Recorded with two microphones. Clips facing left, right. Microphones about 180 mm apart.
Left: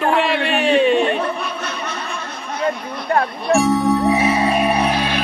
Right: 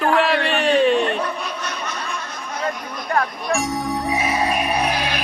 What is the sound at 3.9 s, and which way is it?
Music, 60° left (ahead or behind).